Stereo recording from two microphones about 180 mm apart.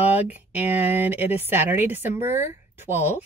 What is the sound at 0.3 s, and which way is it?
A woman's voice, 10° right (ahead or behind).